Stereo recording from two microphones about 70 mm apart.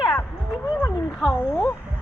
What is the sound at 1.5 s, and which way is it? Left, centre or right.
Speech, left.